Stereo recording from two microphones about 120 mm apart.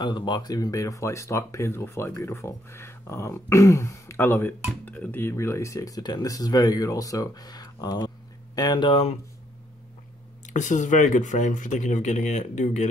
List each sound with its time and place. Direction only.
0.0 s speech: 40° left (ahead or behind)
10.4 s speech: 90° left